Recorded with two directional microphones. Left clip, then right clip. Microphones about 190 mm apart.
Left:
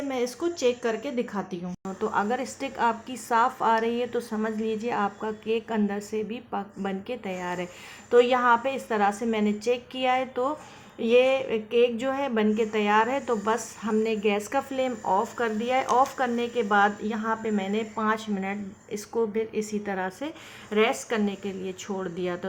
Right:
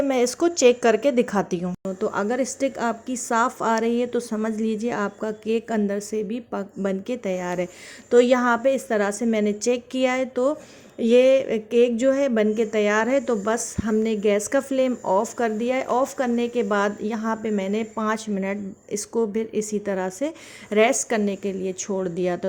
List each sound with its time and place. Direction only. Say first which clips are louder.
0.1 s speech: right 7 dB; 35° right (ahead or behind)